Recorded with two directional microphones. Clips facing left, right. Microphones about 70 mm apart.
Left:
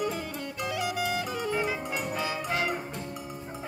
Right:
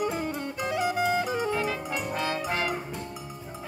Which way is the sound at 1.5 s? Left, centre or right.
Centre.